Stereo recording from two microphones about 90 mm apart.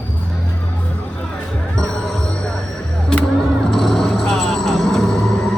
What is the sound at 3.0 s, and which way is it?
Vehicle, 5° left (ahead or behind).